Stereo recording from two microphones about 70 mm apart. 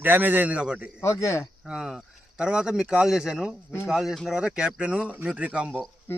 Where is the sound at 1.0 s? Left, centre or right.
Left.